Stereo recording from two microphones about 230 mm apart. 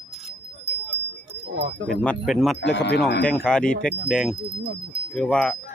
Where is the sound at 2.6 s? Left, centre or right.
Left.